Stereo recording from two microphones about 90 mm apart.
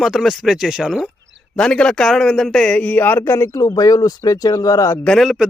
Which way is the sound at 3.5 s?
40° left (ahead or behind).